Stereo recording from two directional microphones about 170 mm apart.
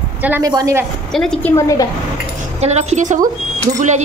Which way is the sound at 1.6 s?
15° left (ahead or behind).